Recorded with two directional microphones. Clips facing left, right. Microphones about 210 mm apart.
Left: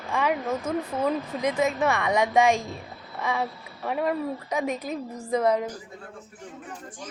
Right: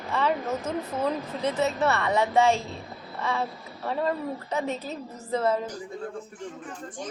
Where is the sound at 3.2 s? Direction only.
10° left (ahead or behind).